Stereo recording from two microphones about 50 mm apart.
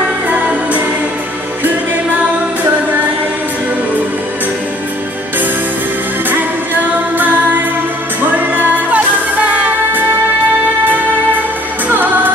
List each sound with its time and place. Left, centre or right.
0.0 s music: right
6.3 s music: right
11.9 s music: right